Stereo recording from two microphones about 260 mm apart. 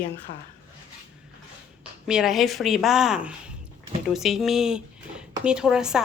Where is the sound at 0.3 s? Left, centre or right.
Left.